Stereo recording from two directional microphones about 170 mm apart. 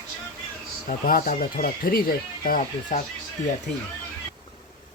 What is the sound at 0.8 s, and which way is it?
Speech, 55° left (ahead or behind).